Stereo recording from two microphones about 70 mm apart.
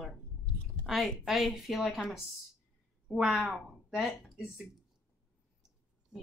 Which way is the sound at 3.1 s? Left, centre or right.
Centre.